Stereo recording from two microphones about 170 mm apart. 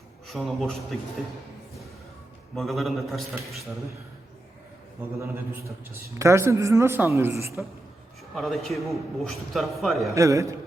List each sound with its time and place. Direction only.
0.3 s a man's voice: centre (ahead or behind)
2.6 s a man's voice: centre (ahead or behind)
5.2 s a man's voice: 15° right (ahead or behind)
8.4 s a man's voice: centre (ahead or behind)
10.2 s a man's voice: 20° right (ahead or behind)